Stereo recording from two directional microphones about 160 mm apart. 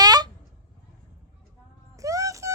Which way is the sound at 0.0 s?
25° right (ahead or behind).